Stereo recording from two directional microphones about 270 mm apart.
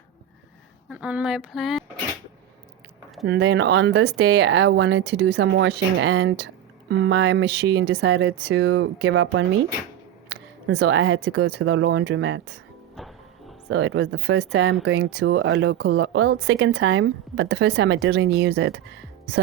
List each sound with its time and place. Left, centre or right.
0.9 s speech: centre
3.2 s speech: right
13.7 s speech: right